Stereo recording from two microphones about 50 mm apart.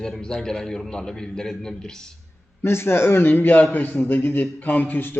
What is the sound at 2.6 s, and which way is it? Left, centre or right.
A man's voice, left.